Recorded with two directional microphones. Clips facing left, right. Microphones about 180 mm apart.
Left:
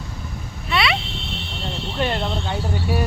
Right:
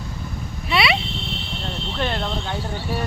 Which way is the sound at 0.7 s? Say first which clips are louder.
Right 1 dB; 10° right (ahead or behind).